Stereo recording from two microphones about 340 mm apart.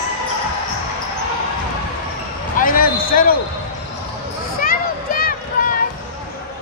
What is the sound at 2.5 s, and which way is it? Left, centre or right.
Basketball bounce, left.